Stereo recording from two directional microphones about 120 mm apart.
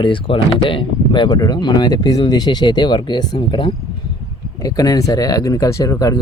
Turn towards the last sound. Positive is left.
turn(degrees=30)  # may be behind; listen again after turning